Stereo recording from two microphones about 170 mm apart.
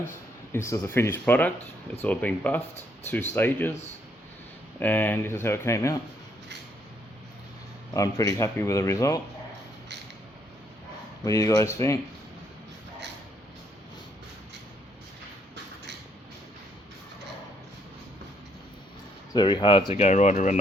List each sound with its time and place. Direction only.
0.5 s speech: 15° left (ahead or behind)
4.8 s speech: 10° left (ahead or behind)
7.9 s speech: 20° left (ahead or behind)
11.3 s speech: 20° left (ahead or behind)
19.3 s speech: 25° left (ahead or behind)
19.9 s speech: 40° left (ahead or behind)